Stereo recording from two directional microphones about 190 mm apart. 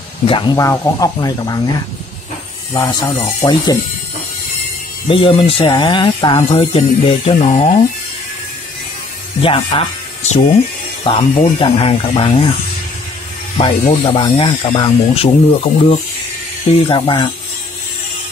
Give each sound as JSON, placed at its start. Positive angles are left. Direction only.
{"t": 0.3, "sound": "speech", "side_deg": 25}
{"t": 2.7, "sound": "speech", "side_deg": 20}
{"t": 5.0, "sound": "speech", "side_deg": 25}
{"t": 9.4, "sound": "speech", "side_deg": 30}
{"t": 13.6, "sound": "speech", "side_deg": 30}